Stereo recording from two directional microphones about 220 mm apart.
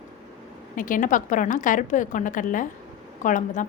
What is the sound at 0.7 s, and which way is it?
A woman's voice, 35° left (ahead or behind).